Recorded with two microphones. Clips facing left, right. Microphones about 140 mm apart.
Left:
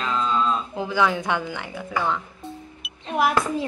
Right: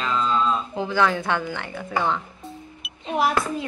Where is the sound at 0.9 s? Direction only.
10° left (ahead or behind).